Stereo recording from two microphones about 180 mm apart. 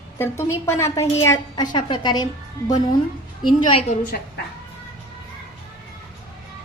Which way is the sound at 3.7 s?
35° left (ahead or behind).